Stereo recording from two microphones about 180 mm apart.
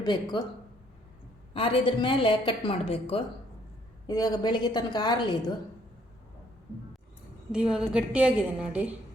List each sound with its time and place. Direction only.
0.0 s a woman's voice: 25° left (ahead or behind)
1.5 s a woman's voice: 30° left (ahead or behind)
4.0 s a woman's voice: 20° left (ahead or behind)
7.5 s a woman's voice: 5° right (ahead or behind)